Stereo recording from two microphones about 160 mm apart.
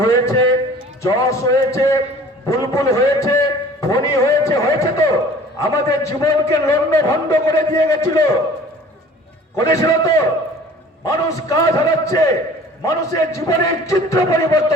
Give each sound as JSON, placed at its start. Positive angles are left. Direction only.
{"t": 0.0, "sound": "a man's voice", "side_deg": 20}
{"t": 9.6, "sound": "a man's voice", "side_deg": 20}